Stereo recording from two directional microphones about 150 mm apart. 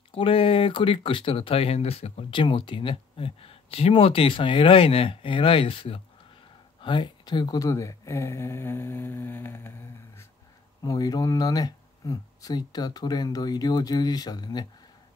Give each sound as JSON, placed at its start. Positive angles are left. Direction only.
{"t": 0.1, "sound": "speech", "side_deg": 35}